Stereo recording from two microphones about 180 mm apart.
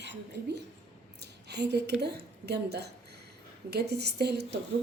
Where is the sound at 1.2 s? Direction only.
70° right (ahead or behind).